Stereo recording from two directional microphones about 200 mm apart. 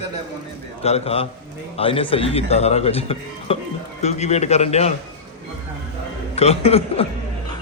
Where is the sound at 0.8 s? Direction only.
30° left (ahead or behind).